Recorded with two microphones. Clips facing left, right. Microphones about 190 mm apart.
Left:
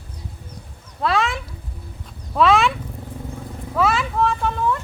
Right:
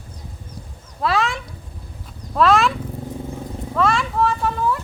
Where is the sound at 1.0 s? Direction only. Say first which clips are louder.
Even; centre (ahead or behind).